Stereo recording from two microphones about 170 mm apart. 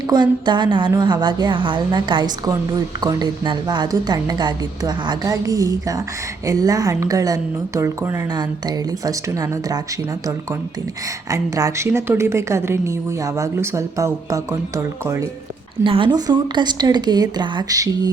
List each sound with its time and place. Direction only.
0.1 s a woman's voice: 25° right (ahead or behind)
11.3 s a woman's voice: 20° right (ahead or behind)
15.8 s a woman's voice: 30° right (ahead or behind)